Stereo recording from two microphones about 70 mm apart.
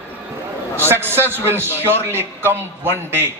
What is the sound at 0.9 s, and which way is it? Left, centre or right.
A man's voice, right.